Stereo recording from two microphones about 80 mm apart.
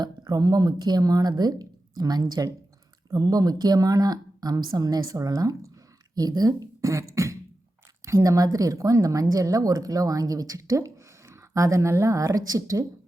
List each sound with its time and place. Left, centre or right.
0.0 s a woman's voice: right